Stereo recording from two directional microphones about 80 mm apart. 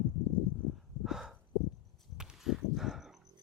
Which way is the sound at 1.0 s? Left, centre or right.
Centre.